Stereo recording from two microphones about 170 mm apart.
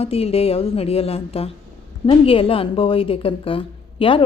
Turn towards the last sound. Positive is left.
turn(degrees=30)  # may be behind; listen again after turning